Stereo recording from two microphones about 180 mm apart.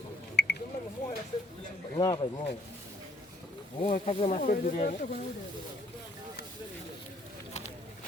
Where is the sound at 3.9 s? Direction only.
35° left (ahead or behind).